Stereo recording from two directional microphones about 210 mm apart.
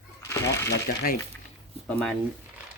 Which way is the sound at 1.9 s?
5° left (ahead or behind).